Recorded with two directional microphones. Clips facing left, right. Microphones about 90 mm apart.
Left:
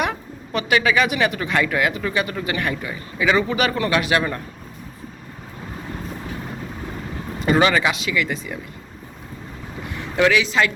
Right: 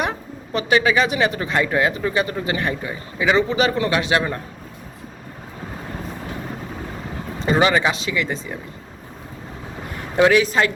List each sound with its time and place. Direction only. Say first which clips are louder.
0.0 s a man's voice: even; 30° right (ahead or behind)
7.3 s speech: even; 25° right (ahead or behind)
10.3 s speech: right 2 dB; 40° right (ahead or behind)